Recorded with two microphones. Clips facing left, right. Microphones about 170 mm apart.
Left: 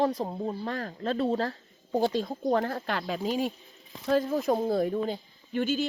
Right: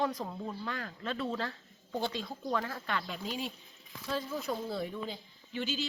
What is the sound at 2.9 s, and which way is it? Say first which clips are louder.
Speech: left 6 dB; 90° left.